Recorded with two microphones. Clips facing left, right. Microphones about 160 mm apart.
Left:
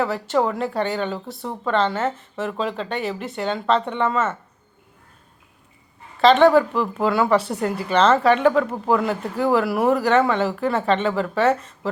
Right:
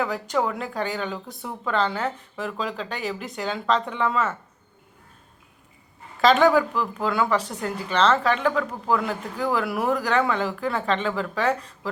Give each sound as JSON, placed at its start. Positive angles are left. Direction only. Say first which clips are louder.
{"t": 0.0, "sound": "a woman's voice", "louder": "left 4 dB", "side_deg": 0}
{"t": 7.0, "sound": "a woman's voice", "louder": "left 5 dB", "side_deg": 5}